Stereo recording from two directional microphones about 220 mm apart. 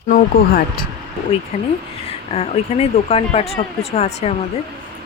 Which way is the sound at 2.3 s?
30° left (ahead or behind).